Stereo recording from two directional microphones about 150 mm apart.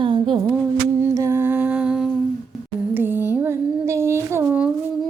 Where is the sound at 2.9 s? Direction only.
15° right (ahead or behind).